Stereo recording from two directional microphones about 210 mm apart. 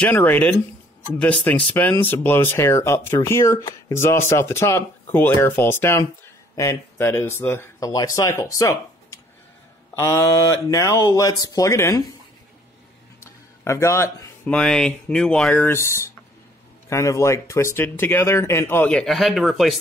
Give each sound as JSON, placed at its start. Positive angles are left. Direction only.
{"t": 0.0, "sound": "speech", "side_deg": 10}
{"t": 13.2, "sound": "speech", "side_deg": 15}